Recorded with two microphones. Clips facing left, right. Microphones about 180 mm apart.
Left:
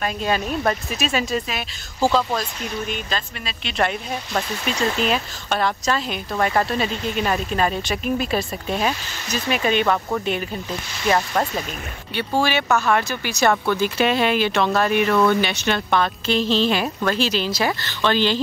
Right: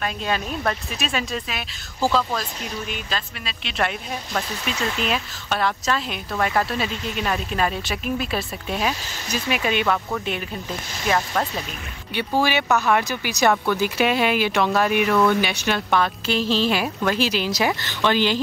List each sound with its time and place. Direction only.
0.0 s speech: 5° left (ahead or behind)
2.9 s speech: centre (ahead or behind)
11.1 s speech: centre (ahead or behind)
12.1 s speech: 15° right (ahead or behind)